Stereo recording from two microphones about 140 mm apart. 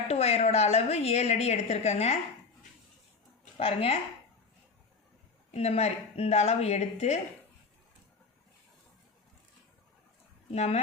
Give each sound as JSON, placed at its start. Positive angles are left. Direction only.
{"t": 0.1, "sound": "a woman's voice", "side_deg": 50}
{"t": 3.6, "sound": "a woman's voice", "side_deg": 45}
{"t": 5.5, "sound": "a woman's voice", "side_deg": 45}
{"t": 10.5, "sound": "a woman's voice", "side_deg": 50}